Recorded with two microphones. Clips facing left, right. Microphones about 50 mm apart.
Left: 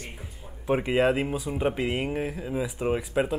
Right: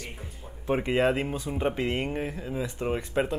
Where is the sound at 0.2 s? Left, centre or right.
Centre.